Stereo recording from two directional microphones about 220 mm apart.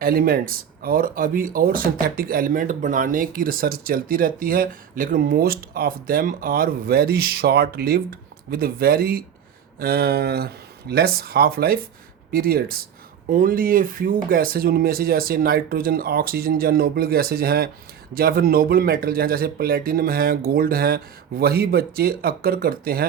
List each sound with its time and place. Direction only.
0.0 s speech: 40° right (ahead or behind)